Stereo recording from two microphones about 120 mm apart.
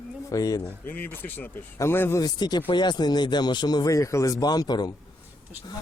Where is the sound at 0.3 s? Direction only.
30° left (ahead or behind).